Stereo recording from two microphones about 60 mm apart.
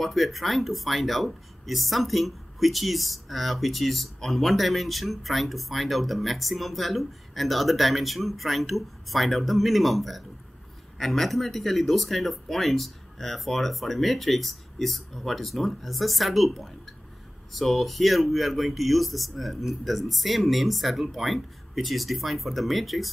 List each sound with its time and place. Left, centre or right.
0.0 s speech: centre